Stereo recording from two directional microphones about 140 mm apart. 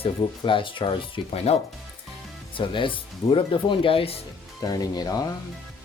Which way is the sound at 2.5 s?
35° left (ahead or behind).